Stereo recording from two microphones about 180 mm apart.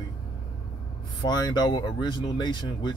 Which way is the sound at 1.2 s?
25° left (ahead or behind).